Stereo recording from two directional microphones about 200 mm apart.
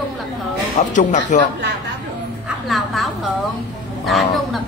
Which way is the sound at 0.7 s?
40° left (ahead or behind).